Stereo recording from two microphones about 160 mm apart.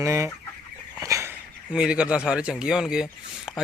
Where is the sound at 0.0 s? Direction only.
15° right (ahead or behind).